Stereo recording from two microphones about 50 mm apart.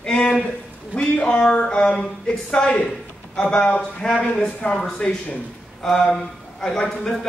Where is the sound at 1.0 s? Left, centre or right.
Centre.